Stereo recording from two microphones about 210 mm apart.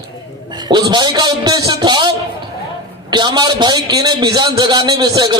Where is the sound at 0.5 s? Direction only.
20° right (ahead or behind).